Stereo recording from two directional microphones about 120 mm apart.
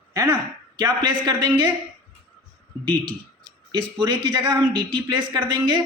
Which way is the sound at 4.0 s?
35° right (ahead or behind).